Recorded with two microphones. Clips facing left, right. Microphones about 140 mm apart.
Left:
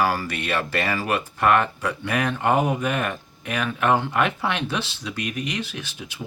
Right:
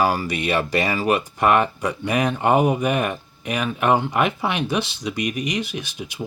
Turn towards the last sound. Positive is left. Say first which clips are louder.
# right 4 dB
turn(degrees=-15)  # may be behind; listen again after turning